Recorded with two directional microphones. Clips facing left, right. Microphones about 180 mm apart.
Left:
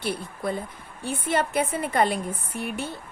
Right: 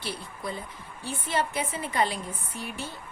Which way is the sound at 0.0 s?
55° left (ahead or behind).